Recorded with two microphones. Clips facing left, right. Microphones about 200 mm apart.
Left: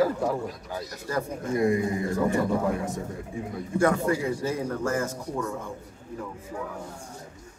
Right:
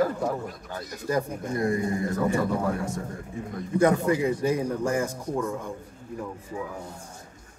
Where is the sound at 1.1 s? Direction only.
15° right (ahead or behind).